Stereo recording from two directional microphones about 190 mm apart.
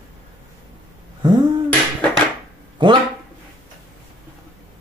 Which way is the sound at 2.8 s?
25° right (ahead or behind).